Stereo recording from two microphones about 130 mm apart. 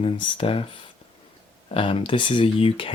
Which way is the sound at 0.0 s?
45° left (ahead or behind).